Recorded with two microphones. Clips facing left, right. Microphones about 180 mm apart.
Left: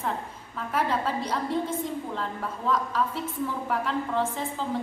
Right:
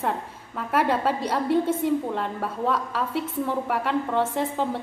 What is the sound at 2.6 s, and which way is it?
A woman's voice, 65° right (ahead or behind).